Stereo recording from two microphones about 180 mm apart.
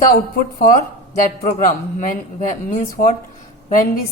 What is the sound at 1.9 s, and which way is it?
Speech, 45° left (ahead or behind).